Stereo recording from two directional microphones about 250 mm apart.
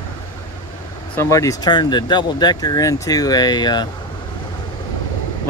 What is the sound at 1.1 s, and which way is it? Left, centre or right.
Speech, centre.